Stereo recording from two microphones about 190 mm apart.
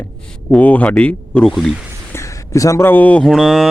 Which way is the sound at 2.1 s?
15° left (ahead or behind).